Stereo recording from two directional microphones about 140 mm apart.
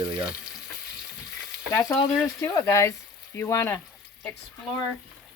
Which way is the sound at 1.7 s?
20° left (ahead or behind).